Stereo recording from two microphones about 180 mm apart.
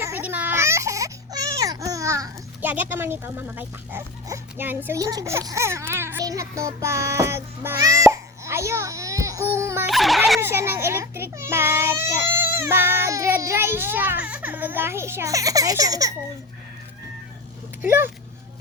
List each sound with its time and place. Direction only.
0.0 s baby cry: 10° right (ahead or behind)
9.5 s baby laughter: 15° right (ahead or behind)
9.9 s a sound: centre (ahead or behind)
10.4 s a child's voice: 15° right (ahead or behind)
17.8 s a child's voice: 10° right (ahead or behind)